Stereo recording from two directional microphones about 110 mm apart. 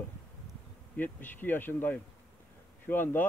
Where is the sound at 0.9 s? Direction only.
15° left (ahead or behind).